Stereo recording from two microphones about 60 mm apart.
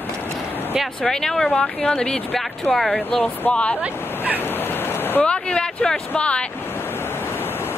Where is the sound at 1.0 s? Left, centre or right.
Centre.